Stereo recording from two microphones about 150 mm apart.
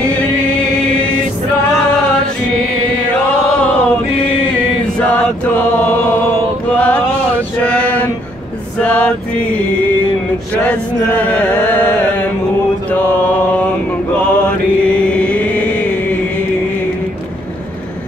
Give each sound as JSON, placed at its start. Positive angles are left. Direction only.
{"t": 6.7, "sound": "mantra", "side_deg": 10}
{"t": 7.6, "sound": "a sound", "side_deg": 10}
{"t": 8.7, "sound": "music", "side_deg": 10}
{"t": 10.6, "sound": "chant", "side_deg": 10}
{"t": 12.9, "sound": "music", "side_deg": 10}
{"t": 14.1, "sound": "chant", "side_deg": 10}